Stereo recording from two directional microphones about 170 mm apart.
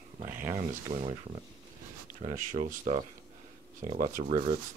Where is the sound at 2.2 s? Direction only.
45° right (ahead or behind).